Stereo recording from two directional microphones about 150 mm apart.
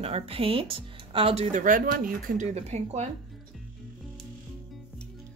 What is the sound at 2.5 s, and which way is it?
Speech, 45° right (ahead or behind).